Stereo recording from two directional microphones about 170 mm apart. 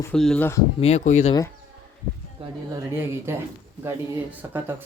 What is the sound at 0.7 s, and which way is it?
Speech, 40° left (ahead or behind).